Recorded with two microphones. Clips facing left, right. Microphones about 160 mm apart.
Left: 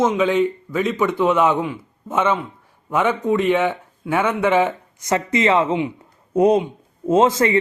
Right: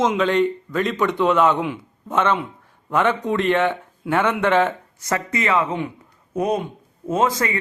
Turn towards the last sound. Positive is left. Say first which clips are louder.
# left 5 dB
turn(degrees=25)  # may be behind; listen again after turning